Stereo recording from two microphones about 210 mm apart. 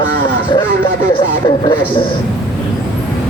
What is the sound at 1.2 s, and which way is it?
Speech, 25° left (ahead or behind).